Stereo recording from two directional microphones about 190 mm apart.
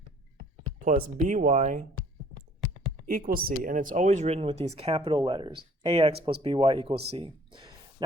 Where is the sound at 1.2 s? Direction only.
40° right (ahead or behind).